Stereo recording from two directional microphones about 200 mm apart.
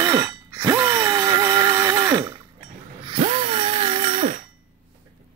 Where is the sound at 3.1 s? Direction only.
30° right (ahead or behind).